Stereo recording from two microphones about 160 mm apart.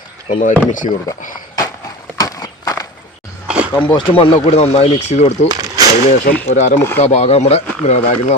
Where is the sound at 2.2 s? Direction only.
20° left (ahead or behind).